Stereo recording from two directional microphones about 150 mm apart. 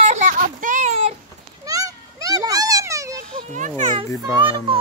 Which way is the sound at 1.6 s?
20° right (ahead or behind).